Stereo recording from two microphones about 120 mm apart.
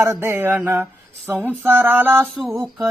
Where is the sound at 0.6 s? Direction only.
15° right (ahead or behind).